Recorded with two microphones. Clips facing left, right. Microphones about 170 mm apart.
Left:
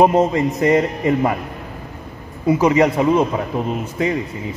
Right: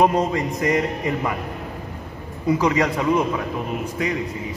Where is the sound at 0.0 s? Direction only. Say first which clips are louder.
Left 5 dB; 20° left (ahead or behind).